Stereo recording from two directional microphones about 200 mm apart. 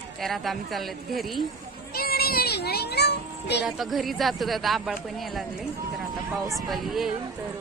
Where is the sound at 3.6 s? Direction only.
Centre (ahead or behind).